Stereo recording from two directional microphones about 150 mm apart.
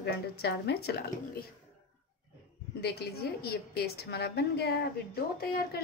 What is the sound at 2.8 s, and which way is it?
A woman's voice, 90° left.